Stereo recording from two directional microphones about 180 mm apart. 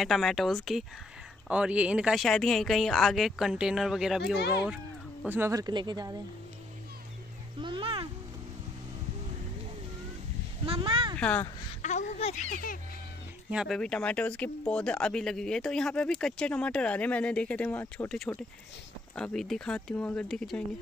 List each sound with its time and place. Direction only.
0.0 s speech: centre (ahead or behind); by 6.2 s 20° right (ahead or behind)
7.6 s a sound: 30° right (ahead or behind)
10.6 s a sound: 30° right (ahead or behind)
11.1 s speech: 5° left (ahead or behind)
11.8 s speech: 40° left (ahead or behind)
13.5 s speech: 5° right (ahead or behind)
13.7 s speech: 5° left (ahead or behind)